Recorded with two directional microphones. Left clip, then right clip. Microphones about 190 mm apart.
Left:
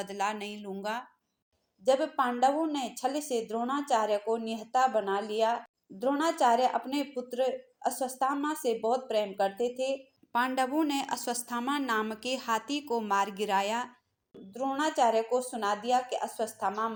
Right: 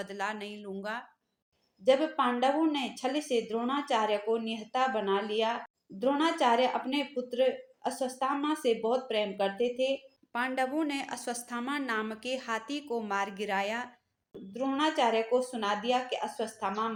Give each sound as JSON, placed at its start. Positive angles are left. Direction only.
{"t": 0.0, "sound": "a woman's voice", "side_deg": 10}
{"t": 1.8, "sound": "speech", "side_deg": 35}
{"t": 10.3, "sound": "a woman's voice", "side_deg": 10}
{"t": 14.5, "sound": "speech", "side_deg": 35}